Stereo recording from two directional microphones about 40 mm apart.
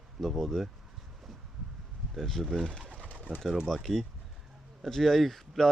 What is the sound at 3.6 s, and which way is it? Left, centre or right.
Speech, centre.